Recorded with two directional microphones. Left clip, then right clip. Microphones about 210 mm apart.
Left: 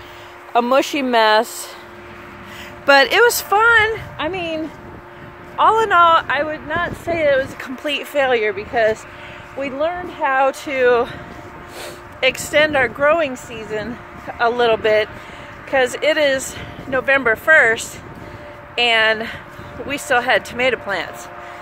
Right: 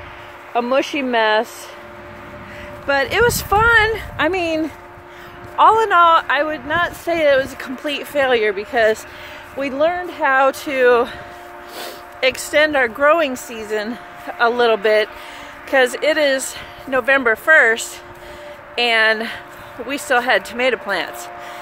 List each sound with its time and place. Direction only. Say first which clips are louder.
0.5 s speech: left 2 dB; 30° left (ahead or behind)
2.9 s speech: left 6 dB; 50° left (ahead or behind)
3.3 s speech: left 1 dB; 10° left (ahead or behind)
3.5 s speech: right 1 dB; centre (ahead or behind)
4.2 s speech: right 6 dB; 20° right (ahead or behind)
5.6 s speech: right 1 dB; centre (ahead or behind)
7.5 s speech: left 1 dB; 5° left (ahead or behind)